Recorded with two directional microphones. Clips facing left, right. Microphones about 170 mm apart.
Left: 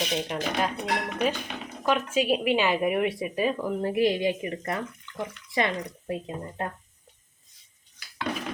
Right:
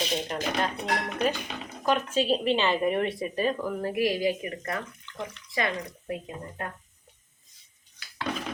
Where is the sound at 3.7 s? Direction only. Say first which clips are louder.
Left 3 dB; 25° left (ahead or behind).